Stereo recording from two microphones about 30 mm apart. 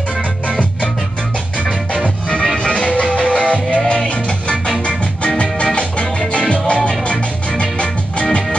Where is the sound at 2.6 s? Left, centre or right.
Left.